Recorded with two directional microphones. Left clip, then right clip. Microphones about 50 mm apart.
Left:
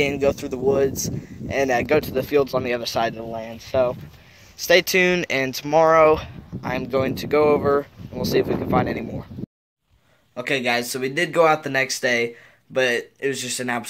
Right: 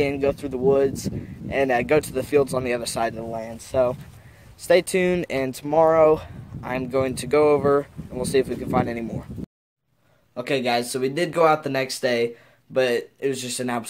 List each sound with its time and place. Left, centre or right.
0.0 s speech: centre
2.0 s speech: right
2.5 s speech: right
3.3 s speech: right
4.6 s speech: centre
5.5 s speech: right
6.7 s speech: right
8.2 s speech: right
10.3 s speech: centre